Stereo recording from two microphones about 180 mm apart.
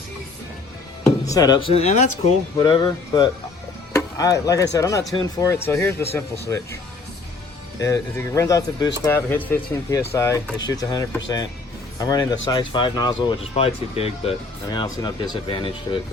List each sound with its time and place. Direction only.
1.3 s speech: 20° left (ahead or behind); by 2.3 s 40° left (ahead or behind)
2.6 s speech: 20° left (ahead or behind)
7.8 s speech: 15° left (ahead or behind)